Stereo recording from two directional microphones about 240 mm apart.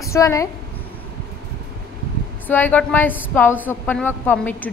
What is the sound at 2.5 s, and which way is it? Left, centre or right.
A woman's voice, centre.